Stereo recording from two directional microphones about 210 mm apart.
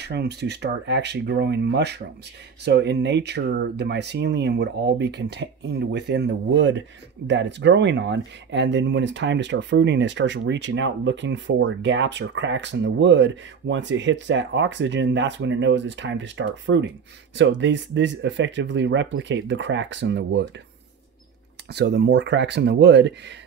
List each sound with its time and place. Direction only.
0.0 s speech: 50° right (ahead or behind)
21.7 s speech: 50° right (ahead or behind)